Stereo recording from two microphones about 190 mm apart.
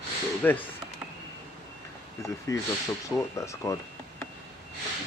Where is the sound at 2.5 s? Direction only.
15° left (ahead or behind).